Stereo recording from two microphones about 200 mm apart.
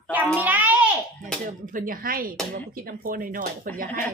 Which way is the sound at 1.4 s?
40° right (ahead or behind).